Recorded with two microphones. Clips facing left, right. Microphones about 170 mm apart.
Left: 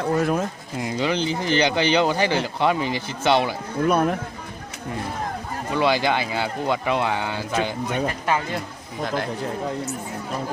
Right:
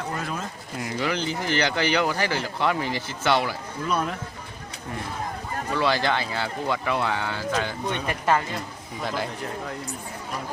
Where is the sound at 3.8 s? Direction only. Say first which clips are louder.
Left 8 dB; 55° left (ahead or behind).